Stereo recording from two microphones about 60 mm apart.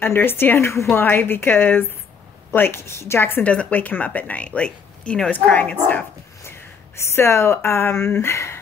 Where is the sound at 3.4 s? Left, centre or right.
Left.